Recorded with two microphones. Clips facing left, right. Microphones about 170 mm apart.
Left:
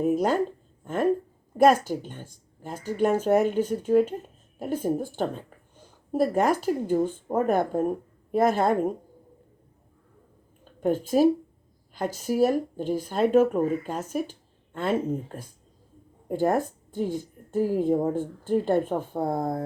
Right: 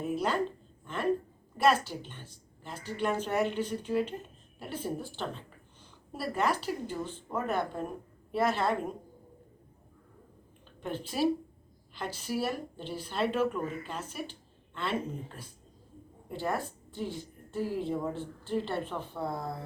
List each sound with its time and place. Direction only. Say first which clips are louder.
0.0 s speech: left 7 dB; 45° left (ahead or behind)
10.8 s speech: left 10 dB; 45° left (ahead or behind)